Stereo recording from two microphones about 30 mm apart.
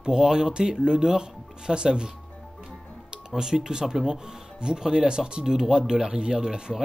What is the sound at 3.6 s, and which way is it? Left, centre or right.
Speech, right.